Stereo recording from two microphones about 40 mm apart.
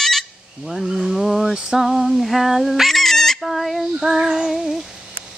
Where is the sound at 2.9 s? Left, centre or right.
Centre.